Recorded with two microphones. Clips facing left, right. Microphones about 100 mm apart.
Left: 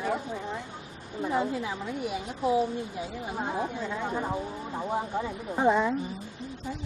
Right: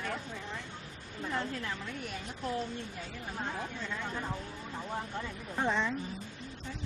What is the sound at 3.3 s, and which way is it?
A woman's voice, 20° left (ahead or behind).